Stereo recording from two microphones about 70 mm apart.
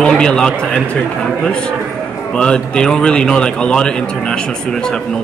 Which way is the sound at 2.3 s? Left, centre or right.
Centre.